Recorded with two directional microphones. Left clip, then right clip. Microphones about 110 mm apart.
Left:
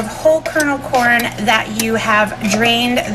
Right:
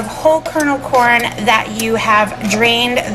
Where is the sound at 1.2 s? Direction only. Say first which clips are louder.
Right 2 dB; 15° right (ahead or behind).